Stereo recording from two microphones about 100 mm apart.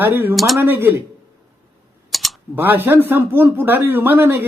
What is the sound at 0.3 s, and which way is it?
Speech, centre (ahead or behind).